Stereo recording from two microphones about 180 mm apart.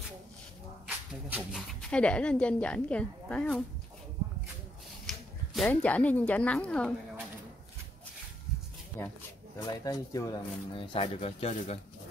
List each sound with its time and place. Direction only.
0.8 s speech: 5° right (ahead or behind)
5.0 s speech: centre (ahead or behind)
9.0 s speech: 15° left (ahead or behind); by 11.8 s 35° left (ahead or behind)